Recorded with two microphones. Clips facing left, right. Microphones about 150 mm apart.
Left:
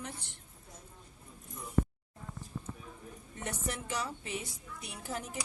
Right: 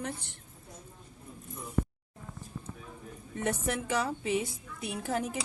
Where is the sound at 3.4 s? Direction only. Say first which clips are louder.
Right 7 dB; 55° right (ahead or behind).